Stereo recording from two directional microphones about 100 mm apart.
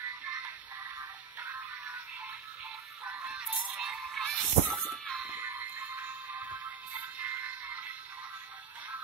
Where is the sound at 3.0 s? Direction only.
15° right (ahead or behind).